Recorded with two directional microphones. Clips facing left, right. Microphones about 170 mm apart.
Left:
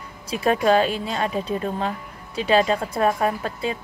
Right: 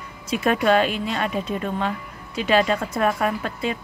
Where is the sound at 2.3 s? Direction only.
30° left (ahead or behind).